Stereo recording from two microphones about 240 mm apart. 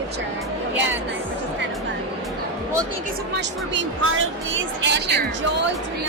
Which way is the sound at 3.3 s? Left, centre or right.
Right.